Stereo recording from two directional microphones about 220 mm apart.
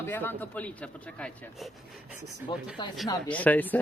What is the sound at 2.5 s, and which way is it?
Speech, 20° left (ahead or behind).